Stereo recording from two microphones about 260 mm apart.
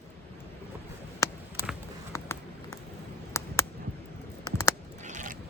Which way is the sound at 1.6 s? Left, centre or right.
Centre.